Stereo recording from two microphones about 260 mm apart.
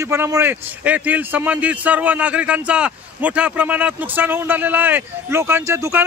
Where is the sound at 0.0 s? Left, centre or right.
Centre.